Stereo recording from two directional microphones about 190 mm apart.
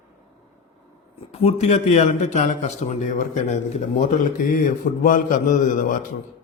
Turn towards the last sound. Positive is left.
turn(degrees=45)  # may be behind; listen again after turning